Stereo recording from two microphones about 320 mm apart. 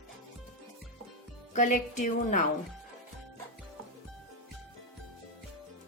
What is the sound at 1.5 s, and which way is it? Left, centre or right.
Speech, left.